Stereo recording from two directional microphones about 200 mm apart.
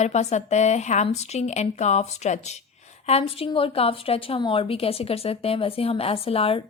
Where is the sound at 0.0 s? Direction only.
35° left (ahead or behind).